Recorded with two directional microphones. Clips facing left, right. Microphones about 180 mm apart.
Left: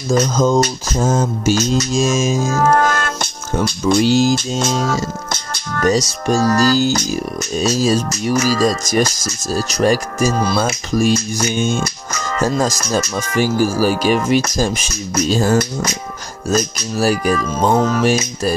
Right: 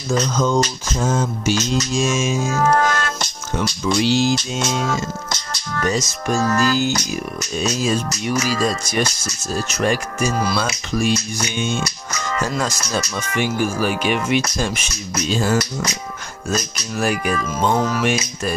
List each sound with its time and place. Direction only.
0.1 s mantra: 40° left (ahead or behind)
5.3 s speech: 50° left (ahead or behind); by 10.6 s 30° left (ahead or behind)
10.6 s speech: 45° left (ahead or behind)
15.1 s mantra: 40° left (ahead or behind)
16.4 s speech: 40° left (ahead or behind)